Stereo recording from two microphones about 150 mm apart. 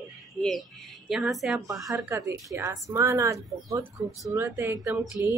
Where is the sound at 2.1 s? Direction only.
20° right (ahead or behind).